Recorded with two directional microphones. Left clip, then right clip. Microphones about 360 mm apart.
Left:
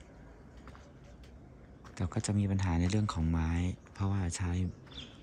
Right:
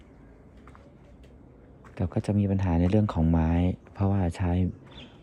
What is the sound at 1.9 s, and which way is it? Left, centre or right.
Speech, centre.